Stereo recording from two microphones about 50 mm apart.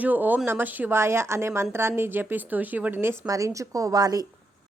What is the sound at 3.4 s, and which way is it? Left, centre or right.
Speech, right.